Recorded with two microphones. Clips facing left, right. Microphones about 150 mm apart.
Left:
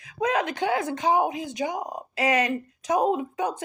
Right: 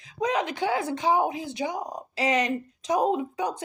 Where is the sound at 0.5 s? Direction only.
20° left (ahead or behind).